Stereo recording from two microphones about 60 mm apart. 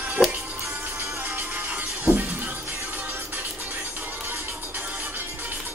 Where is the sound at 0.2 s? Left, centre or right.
Centre.